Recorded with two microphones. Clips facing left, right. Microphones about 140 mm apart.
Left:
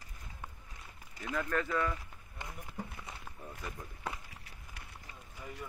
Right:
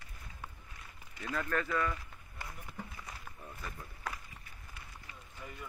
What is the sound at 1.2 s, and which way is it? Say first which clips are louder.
Run: left 1 dB; 15° left (ahead or behind).